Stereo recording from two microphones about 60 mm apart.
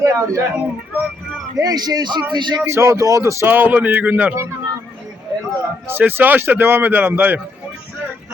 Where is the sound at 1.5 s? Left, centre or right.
Right.